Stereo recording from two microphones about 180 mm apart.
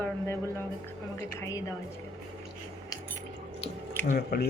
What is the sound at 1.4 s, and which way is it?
Speech, 20° left (ahead or behind).